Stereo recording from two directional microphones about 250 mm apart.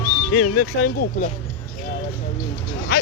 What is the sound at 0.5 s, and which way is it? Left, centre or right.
Speech, left.